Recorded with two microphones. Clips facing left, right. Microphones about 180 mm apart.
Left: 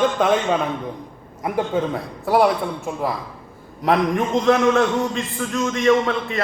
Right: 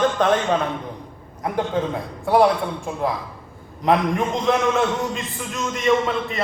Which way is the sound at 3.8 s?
Centre (ahead or behind).